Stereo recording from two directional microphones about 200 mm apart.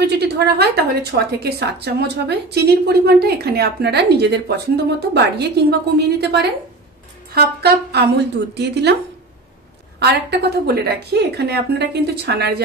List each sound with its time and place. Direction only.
0.0 s a woman's voice: 55° right (ahead or behind)
9.9 s a woman's voice: 55° right (ahead or behind)